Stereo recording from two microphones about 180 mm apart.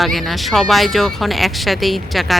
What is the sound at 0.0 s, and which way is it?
Speech, centre (ahead or behind).